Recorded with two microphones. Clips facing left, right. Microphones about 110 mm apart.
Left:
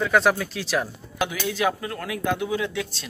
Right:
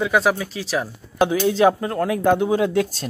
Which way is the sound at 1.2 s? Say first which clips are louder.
Right 8 dB; 35° right (ahead or behind).